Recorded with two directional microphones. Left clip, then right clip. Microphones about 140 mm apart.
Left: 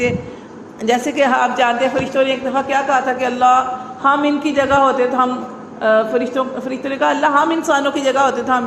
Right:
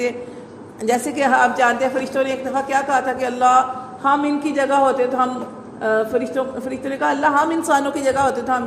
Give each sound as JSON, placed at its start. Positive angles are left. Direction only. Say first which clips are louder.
{"t": 0.8, "sound": "a woman's voice", "louder": "left 3 dB", "side_deg": -30}